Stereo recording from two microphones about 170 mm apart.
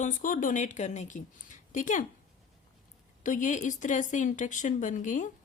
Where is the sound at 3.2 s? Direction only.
45° left (ahead or behind).